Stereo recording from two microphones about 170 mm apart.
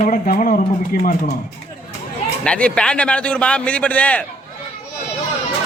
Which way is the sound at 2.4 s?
5° left (ahead or behind).